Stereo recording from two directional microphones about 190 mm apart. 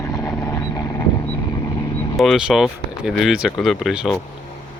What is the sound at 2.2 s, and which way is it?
Speech, centre (ahead or behind).